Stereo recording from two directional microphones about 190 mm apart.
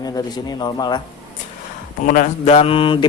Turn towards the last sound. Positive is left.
turn(degrees=25)  # may be behind; listen again after turning